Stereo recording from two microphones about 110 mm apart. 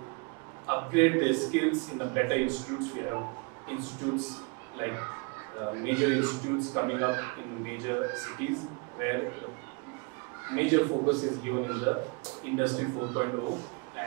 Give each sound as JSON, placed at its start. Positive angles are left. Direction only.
{"t": 0.7, "sound": "a man's voice", "side_deg": -25}
{"t": 10.5, "sound": "a man's voice", "side_deg": -25}